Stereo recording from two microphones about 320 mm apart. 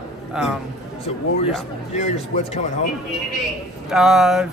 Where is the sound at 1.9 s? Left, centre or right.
Left.